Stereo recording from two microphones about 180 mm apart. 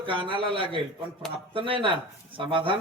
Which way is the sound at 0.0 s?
30° right (ahead or behind).